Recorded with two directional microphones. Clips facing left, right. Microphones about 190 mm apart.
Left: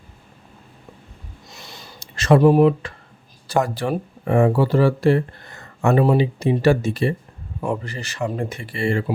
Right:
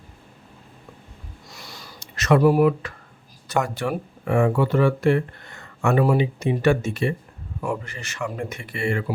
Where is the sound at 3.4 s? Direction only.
35° left (ahead or behind).